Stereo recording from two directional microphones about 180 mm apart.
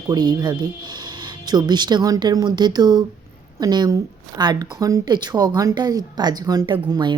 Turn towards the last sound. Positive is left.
turn(degrees=-25)  # may be behind; listen again after turning